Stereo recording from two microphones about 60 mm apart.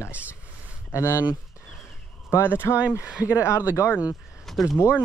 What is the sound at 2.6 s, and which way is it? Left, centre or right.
Speech, left.